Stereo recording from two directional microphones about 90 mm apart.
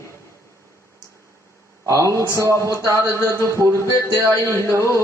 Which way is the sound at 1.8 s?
35° right (ahead or behind).